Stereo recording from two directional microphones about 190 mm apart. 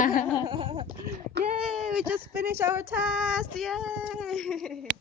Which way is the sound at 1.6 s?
Centre (ahead or behind).